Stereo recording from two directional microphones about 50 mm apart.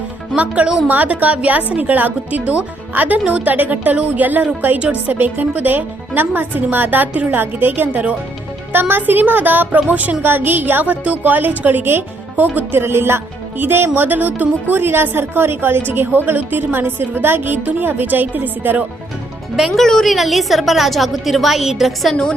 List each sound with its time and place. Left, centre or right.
0.3 s speech: right
5.1 s speech: right
10.2 s speech: right
12.8 s a woman's voice: right
14.8 s a woman's voice: right
19.5 s speech: centre
19.8 s a woman's voice: centre
22.1 s a woman's voice: centre